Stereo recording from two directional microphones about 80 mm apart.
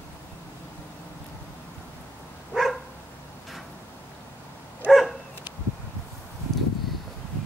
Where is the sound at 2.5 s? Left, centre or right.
Centre.